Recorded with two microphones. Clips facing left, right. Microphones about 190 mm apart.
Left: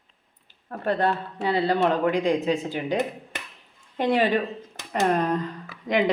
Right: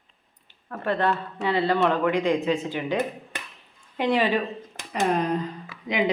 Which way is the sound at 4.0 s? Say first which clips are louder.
Left 1 dB; 50° left (ahead or behind).